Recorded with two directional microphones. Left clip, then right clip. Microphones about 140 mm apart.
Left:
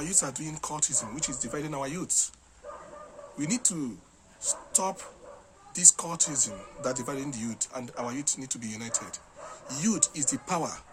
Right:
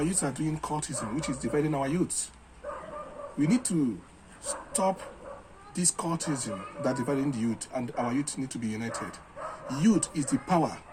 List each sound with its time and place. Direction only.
0.0 s speech: 25° left (ahead or behind)
3.4 s speech: 25° left (ahead or behind)